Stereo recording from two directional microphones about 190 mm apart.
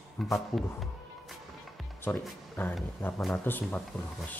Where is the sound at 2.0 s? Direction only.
10° left (ahead or behind).